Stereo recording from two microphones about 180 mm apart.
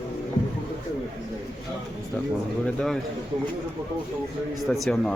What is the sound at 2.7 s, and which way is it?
Speech, centre (ahead or behind).